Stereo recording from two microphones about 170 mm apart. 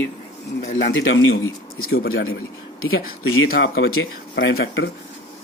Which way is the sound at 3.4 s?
60° left (ahead or behind).